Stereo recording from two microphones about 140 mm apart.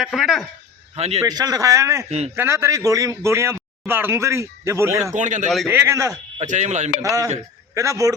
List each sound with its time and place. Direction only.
0.0 s a man's voice: centre (ahead or behind)
0.9 s a man's voice: 50° right (ahead or behind)
1.2 s a man's voice: 25° right (ahead or behind)
2.0 s a man's voice: 50° right (ahead or behind)
2.3 s a man's voice: 20° right (ahead or behind)
5.1 s speech: 60° right (ahead or behind)
5.6 s a man's voice: 20° right (ahead or behind)
6.4 s speech: 60° right (ahead or behind)
7.0 s a man's voice: 25° right (ahead or behind)